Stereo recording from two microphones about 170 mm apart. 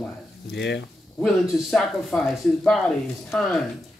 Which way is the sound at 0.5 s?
90° left.